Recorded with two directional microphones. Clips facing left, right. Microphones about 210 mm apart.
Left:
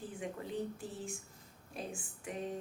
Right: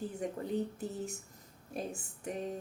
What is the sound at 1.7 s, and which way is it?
Speech, 40° right (ahead or behind).